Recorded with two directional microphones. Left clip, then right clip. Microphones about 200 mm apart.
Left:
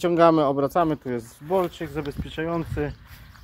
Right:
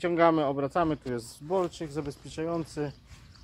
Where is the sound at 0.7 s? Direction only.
5° right (ahead or behind).